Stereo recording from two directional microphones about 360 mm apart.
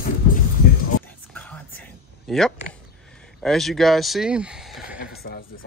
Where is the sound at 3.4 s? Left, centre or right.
Centre.